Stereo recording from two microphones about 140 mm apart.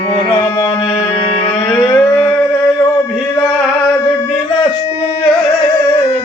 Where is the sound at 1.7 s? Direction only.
20° left (ahead or behind).